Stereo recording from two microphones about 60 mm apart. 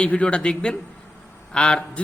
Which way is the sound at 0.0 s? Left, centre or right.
Centre.